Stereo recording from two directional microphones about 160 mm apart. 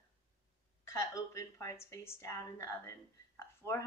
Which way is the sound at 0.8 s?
20° left (ahead or behind).